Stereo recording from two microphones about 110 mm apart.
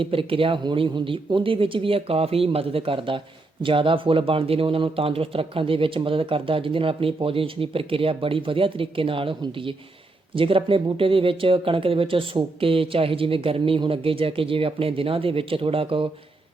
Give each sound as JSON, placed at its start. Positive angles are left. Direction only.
{"t": 0.0, "sound": "speech", "side_deg": -55}